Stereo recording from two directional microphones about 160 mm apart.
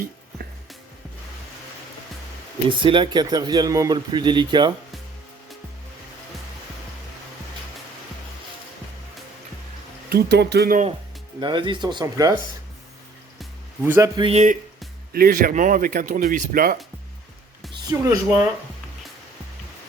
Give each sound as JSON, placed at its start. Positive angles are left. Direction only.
{"t": 2.6, "sound": "speech", "side_deg": -30}
{"t": 10.1, "sound": "speech", "side_deg": -85}
{"t": 11.3, "sound": "speech", "side_deg": -30}
{"t": 13.8, "sound": "a man's voice", "side_deg": -15}
{"t": 14.2, "sound": "speech", "side_deg": -35}
{"t": 15.1, "sound": "speech", "side_deg": -65}
{"t": 17.7, "sound": "speech", "side_deg": -20}